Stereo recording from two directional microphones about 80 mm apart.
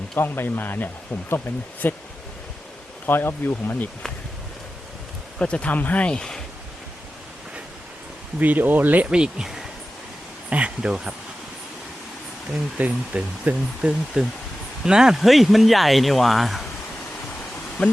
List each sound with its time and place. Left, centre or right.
0.2 s speech: left
3.1 s speech: left
5.4 s speech: centre
8.4 s speech: right
12.7 s speech: centre
17.8 s speech: centre